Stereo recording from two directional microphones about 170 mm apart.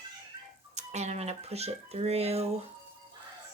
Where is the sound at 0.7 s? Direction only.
40° right (ahead or behind).